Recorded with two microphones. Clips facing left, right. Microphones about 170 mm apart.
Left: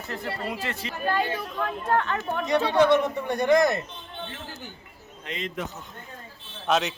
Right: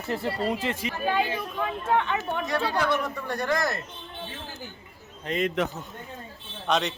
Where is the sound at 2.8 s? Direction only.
20° left (ahead or behind).